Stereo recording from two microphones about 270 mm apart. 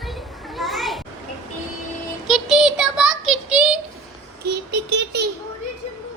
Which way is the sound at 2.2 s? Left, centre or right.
Centre.